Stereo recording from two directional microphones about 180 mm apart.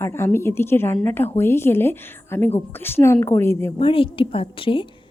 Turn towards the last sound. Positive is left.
turn(degrees=30)  # may be behind; listen again after turning